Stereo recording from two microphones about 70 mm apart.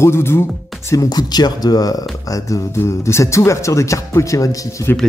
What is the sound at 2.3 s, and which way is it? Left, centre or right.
Speech, left.